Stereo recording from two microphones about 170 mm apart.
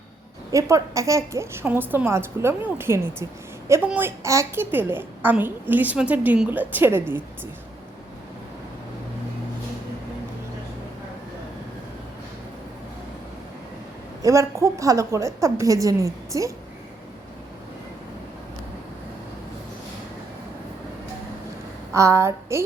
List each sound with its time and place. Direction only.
0.5 s a woman's voice: 20° right (ahead or behind)
14.2 s a woman's voice: 20° right (ahead or behind)
21.9 s a woman's voice: 15° right (ahead or behind)